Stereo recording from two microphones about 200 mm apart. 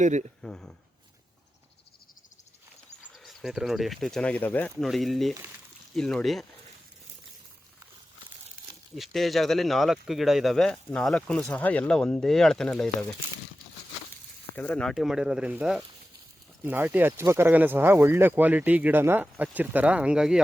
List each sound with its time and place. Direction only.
0.0 s speech: 35° right (ahead or behind)
0.4 s speech: 5° left (ahead or behind)
3.1 s speech: centre (ahead or behind)
9.0 s speech: centre (ahead or behind)
14.5 s speech: 5° left (ahead or behind)